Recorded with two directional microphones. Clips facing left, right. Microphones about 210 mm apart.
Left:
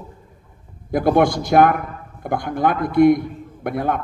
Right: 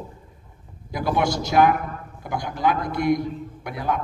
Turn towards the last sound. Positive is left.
turn(degrees=55)  # may be behind; listen again after turning